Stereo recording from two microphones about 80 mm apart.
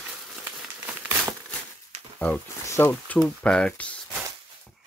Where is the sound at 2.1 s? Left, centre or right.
Centre.